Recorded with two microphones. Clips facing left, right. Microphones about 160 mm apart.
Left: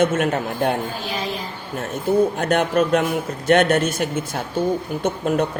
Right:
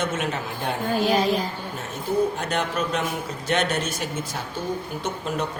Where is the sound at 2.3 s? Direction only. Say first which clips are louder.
Left 7 dB; 55° left (ahead or behind).